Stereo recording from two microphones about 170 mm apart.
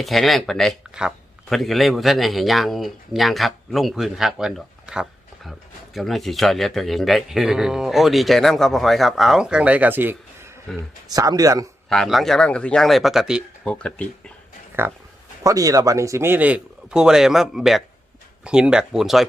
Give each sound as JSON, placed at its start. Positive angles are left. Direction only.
{"t": 0.0, "sound": "speech", "side_deg": 0}
{"t": 10.7, "sound": "speech", "side_deg": 5}
{"t": 11.1, "sound": "speech", "side_deg": -20}
{"t": 11.9, "sound": "speech", "side_deg": 0}
{"t": 14.8, "sound": "speech", "side_deg": -10}